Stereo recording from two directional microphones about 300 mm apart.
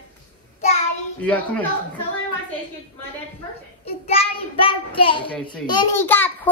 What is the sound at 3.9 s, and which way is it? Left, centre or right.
A child's voice, centre.